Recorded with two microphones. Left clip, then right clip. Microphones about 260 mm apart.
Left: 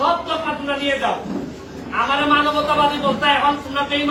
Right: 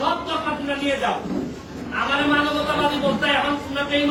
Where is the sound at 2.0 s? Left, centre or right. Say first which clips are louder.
Left 4 dB; centre.